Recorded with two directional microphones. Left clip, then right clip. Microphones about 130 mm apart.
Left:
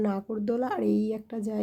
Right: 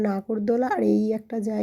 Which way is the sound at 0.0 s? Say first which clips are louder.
Right 4 dB; 30° right (ahead or behind).